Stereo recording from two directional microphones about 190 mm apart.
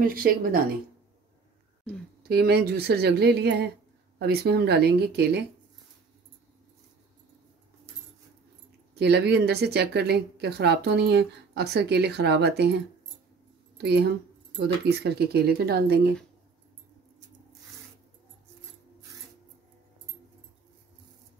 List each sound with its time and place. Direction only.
0.0 s speech: 50° right (ahead or behind)
2.2 s speech: 55° right (ahead or behind)
8.9 s speech: 60° right (ahead or behind)